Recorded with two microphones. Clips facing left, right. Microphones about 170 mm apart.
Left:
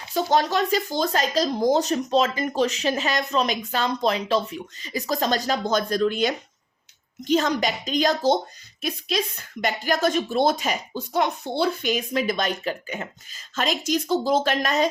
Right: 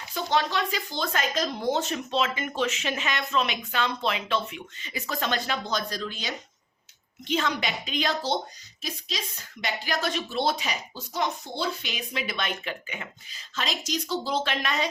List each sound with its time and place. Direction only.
0.1 s speech: 40° left (ahead or behind)
7.3 s speech: 40° left (ahead or behind)
8.8 s speech: 55° left (ahead or behind)